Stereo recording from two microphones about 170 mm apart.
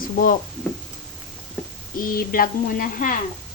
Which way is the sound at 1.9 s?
55° left (ahead or behind).